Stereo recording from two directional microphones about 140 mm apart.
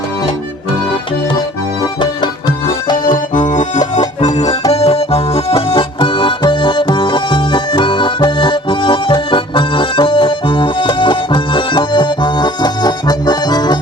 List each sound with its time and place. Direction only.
3.0 s accordion: 70° left (ahead or behind)
4.7 s music: 45° left (ahead or behind); by 13.7 s 30° left (ahead or behind)